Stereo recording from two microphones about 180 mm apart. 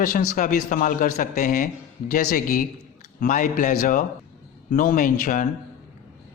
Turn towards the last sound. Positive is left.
turn(degrees=50)  # may be behind; listen again after turning